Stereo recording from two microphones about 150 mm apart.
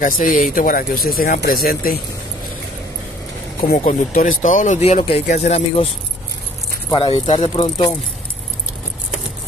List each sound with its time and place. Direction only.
0.0 s speech: 65° left (ahead or behind); by 2.0 s 80° left
3.7 s speech: 60° left (ahead or behind)
7.0 s speech: 40° left (ahead or behind)